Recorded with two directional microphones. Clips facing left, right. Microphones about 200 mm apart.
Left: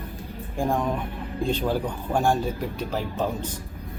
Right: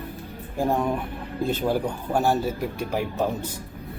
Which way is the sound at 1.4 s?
5° right (ahead or behind).